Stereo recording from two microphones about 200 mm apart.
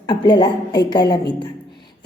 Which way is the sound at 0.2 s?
20° left (ahead or behind).